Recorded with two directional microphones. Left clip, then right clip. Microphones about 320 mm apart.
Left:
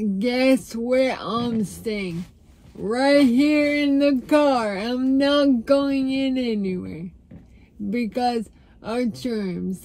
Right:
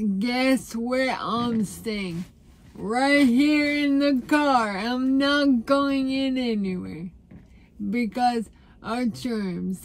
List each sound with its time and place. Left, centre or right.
0.2 s speech: centre